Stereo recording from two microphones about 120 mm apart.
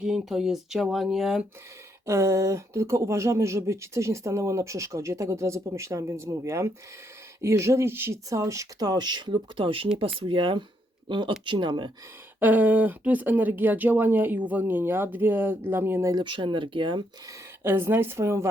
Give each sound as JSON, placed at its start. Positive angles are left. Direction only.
{"t": 0.0, "sound": "speech", "side_deg": -5}
{"t": 2.0, "sound": "speech", "side_deg": -25}
{"t": 12.4, "sound": "speech", "side_deg": -15}
{"t": 16.0, "sound": "speech", "side_deg": -40}
{"t": 17.2, "sound": "speech", "side_deg": -20}